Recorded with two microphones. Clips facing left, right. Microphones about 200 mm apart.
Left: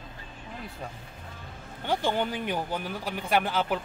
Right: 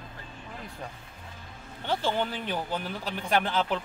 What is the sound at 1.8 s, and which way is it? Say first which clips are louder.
Speech: left 1 dB; 15° left (ahead or behind).